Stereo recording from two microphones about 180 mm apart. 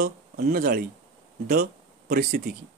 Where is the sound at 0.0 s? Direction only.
60° right (ahead or behind).